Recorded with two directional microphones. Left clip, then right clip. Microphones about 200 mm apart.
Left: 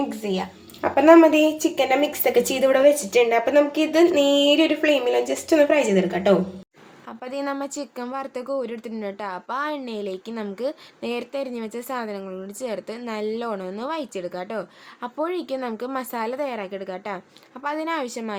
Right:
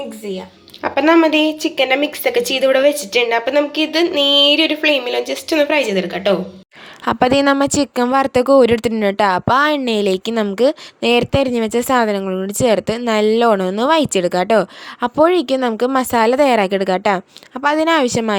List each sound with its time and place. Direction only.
0.8 s a woman's voice: centre (ahead or behind)
7.0 s speech: 50° right (ahead or behind)